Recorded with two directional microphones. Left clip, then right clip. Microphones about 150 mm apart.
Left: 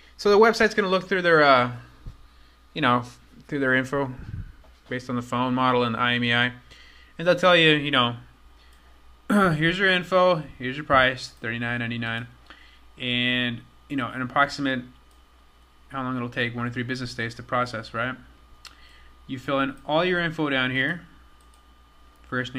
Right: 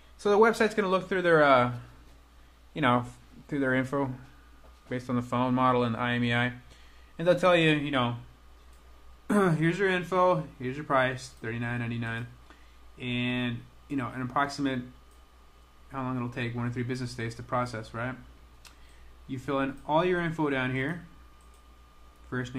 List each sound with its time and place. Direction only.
0.2 s speech: 10° left (ahead or behind)
2.7 s speech: 15° left (ahead or behind)
3.0 s speech: 5° left (ahead or behind)
9.3 s speech: 15° left (ahead or behind)
15.9 s speech: 15° left (ahead or behind)
19.2 s speech: 10° left (ahead or behind)
22.3 s speech: 15° left (ahead or behind)